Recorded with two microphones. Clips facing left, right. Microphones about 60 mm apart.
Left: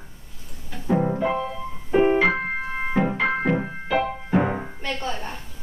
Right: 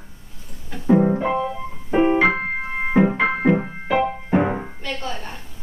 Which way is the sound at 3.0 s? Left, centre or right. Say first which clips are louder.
Right 6 dB; right.